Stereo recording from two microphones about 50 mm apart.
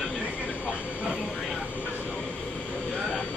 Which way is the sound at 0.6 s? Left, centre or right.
Right.